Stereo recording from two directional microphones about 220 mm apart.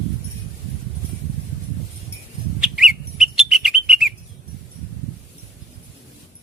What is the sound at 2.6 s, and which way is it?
Bird, centre (ahead or behind).